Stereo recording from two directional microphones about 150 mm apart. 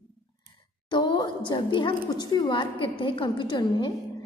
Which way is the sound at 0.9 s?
30° left (ahead or behind).